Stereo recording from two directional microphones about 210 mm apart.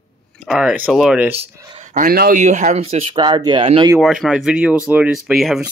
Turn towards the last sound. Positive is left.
turn(degrees=0)  # may be behind; listen again after turning